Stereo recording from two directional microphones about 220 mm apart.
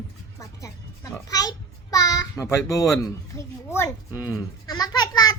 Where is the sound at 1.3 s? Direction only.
15° left (ahead or behind).